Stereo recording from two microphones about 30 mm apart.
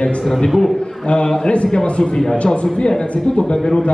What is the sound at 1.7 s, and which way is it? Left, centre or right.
Speech, left.